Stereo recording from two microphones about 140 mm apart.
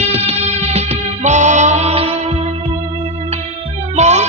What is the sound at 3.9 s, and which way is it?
Music, 55° right (ahead or behind).